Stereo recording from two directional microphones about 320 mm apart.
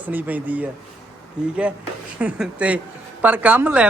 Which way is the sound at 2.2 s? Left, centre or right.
Centre.